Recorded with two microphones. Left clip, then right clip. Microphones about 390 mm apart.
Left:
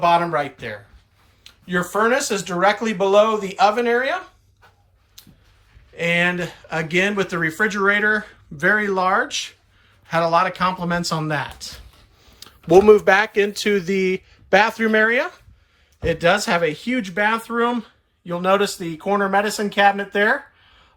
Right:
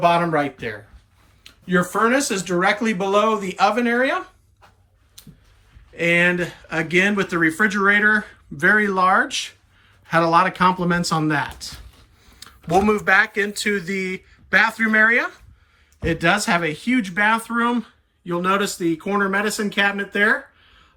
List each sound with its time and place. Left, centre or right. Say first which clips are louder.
0.0 s speech: even; centre
5.2 s a sound: even; centre
5.9 s speech: right 2 dB; centre